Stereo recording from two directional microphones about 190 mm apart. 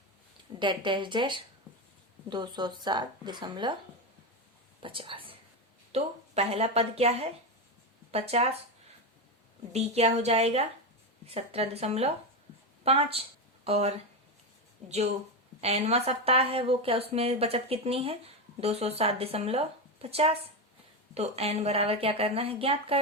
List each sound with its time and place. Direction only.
0.6 s a woman's voice: 25° right (ahead or behind)
4.8 s a woman's voice: 25° right (ahead or behind)
9.7 s a woman's voice: 35° right (ahead or behind)